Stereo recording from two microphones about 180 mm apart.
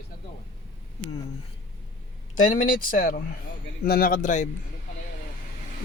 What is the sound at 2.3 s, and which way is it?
Speech, 45° left (ahead or behind).